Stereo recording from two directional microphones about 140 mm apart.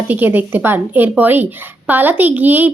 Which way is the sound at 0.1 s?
15° right (ahead or behind).